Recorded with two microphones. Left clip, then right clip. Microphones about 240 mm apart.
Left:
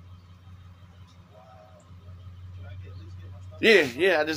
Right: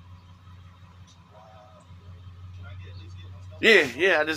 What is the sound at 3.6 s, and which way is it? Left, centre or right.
Speech, centre.